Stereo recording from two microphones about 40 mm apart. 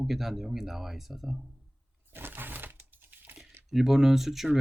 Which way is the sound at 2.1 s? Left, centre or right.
Right.